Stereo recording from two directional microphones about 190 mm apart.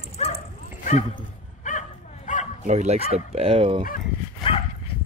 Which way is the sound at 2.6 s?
35° right (ahead or behind).